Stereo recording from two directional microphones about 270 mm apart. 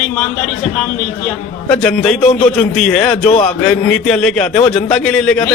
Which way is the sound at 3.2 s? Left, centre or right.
Left.